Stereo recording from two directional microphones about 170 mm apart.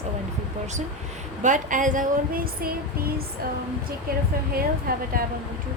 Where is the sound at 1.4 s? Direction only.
50° right (ahead or behind).